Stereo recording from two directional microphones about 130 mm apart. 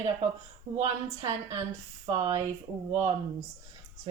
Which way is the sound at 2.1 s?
25° right (ahead or behind).